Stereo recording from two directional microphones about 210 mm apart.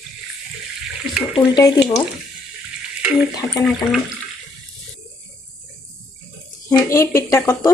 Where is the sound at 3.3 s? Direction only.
20° left (ahead or behind).